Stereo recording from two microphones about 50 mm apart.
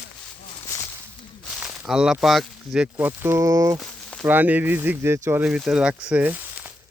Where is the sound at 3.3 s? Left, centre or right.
Right.